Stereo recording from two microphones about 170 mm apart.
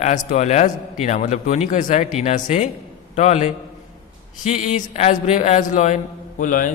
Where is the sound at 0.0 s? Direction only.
45° left (ahead or behind).